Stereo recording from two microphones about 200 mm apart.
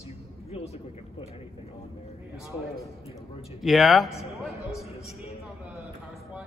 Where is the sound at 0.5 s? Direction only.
30° left (ahead or behind).